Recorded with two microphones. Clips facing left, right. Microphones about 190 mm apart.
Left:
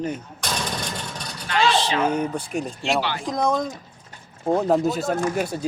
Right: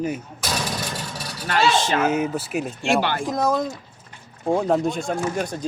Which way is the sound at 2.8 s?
50° right (ahead or behind).